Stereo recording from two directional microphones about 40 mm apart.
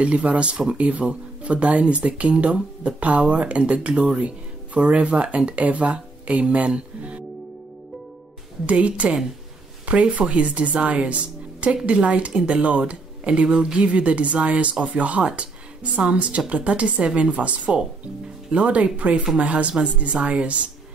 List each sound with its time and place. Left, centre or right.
0.0 s speech: right
8.6 s speech: right